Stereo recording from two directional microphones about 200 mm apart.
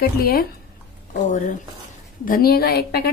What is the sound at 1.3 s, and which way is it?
Speech, 35° left (ahead or behind).